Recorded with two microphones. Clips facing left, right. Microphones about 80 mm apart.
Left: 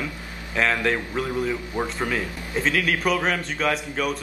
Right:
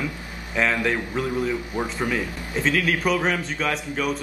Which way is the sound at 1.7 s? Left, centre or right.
Left.